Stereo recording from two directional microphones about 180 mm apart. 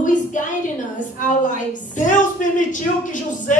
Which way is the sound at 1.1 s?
45° left (ahead or behind).